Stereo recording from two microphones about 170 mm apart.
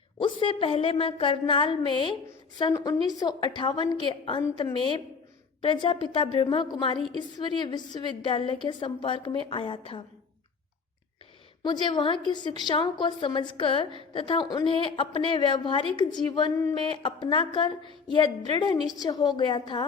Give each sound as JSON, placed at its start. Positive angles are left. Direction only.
{"t": 0.2, "sound": "a woman's voice", "side_deg": 30}
{"t": 11.6, "sound": "a woman's voice", "side_deg": 25}